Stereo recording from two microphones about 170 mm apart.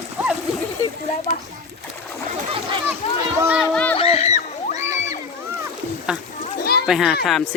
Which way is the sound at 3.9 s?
35° left (ahead or behind).